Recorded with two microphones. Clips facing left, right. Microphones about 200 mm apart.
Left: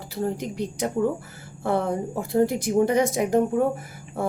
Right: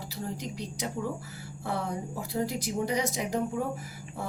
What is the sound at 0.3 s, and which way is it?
Speech, 55° left (ahead or behind).